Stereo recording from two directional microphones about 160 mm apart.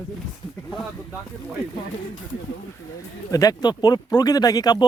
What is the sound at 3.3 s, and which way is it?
Speech, 20° left (ahead or behind).